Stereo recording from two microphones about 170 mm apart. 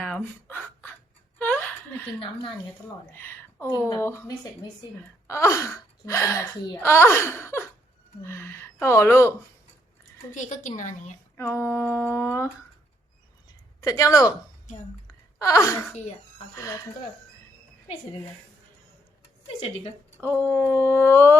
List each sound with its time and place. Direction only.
0.0 s a sound: 10° left (ahead or behind)
3.1 s a woman's voice: 10° left (ahead or behind)
10.3 s a woman's voice: 45° left (ahead or behind)
11.3 s speech: 15° left (ahead or behind)
13.8 s speech: 20° left (ahead or behind)
14.7 s a woman's voice: 45° left (ahead or behind)
15.4 s speech: 20° left (ahead or behind)
20.2 s speech: 10° left (ahead or behind)